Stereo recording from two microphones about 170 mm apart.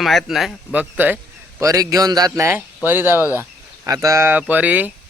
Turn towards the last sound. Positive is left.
turn(degrees=-10)  # may be behind; listen again after turning